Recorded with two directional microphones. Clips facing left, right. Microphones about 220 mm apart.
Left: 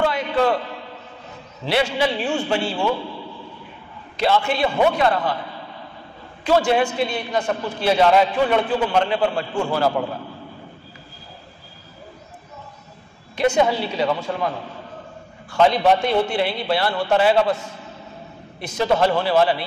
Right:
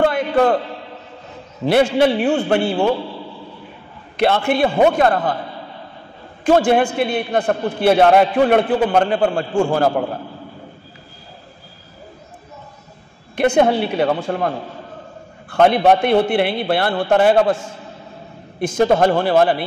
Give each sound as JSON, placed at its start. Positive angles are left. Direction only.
{"t": 0.0, "sound": "a sound", "side_deg": -50}
{"t": 1.7, "sound": "a man's voice", "side_deg": -50}
{"t": 4.2, "sound": "a man's voice", "side_deg": -55}
{"t": 6.4, "sound": "a man's voice", "side_deg": -50}
{"t": 13.4, "sound": "a man's voice", "side_deg": -55}
{"t": 15.5, "sound": "a man's voice", "side_deg": -55}